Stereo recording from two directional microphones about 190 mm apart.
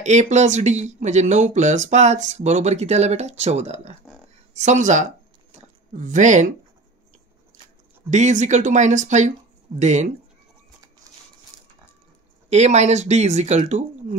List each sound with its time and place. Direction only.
0.0 s speech: 35° right (ahead or behind)
8.1 s speech: 40° right (ahead or behind)
11.5 s a sound: 20° left (ahead or behind)
12.4 s speech: 35° right (ahead or behind)